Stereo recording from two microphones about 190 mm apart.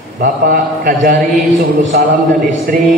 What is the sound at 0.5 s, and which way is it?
A man's voice, 50° right (ahead or behind).